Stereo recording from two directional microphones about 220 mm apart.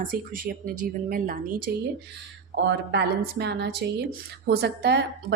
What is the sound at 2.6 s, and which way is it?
A woman's voice, 50° right (ahead or behind).